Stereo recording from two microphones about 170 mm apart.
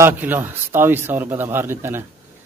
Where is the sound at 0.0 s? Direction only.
10° right (ahead or behind).